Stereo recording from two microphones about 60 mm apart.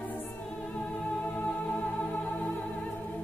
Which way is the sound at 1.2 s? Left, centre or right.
Left.